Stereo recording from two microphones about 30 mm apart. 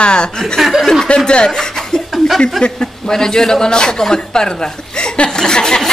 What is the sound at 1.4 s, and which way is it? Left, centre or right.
A man's voice, centre.